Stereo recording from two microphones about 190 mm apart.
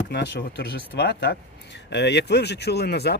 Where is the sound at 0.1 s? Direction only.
60° left (ahead or behind).